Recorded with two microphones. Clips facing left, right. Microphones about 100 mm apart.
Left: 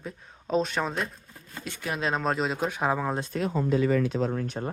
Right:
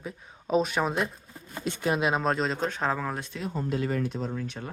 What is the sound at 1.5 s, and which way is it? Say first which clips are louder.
Speech: right 6 dB; 25° right (ahead or behind).